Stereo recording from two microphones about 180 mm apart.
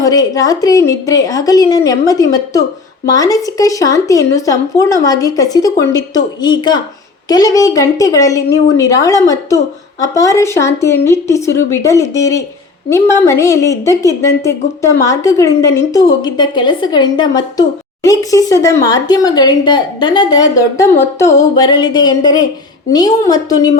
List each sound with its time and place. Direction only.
0.0 s a woman's voice: 20° left (ahead or behind)